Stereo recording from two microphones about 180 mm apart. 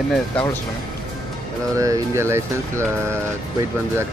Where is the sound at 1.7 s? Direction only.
15° right (ahead or behind).